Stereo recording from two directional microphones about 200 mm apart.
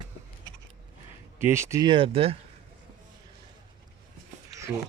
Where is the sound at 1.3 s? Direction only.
10° right (ahead or behind); by 2.3 s 30° right (ahead or behind).